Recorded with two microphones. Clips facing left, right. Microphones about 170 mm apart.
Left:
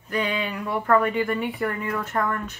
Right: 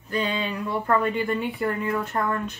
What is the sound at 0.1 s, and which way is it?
Speech, 30° right (ahead or behind).